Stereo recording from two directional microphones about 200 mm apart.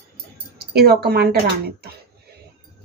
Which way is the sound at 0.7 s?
55° right (ahead or behind).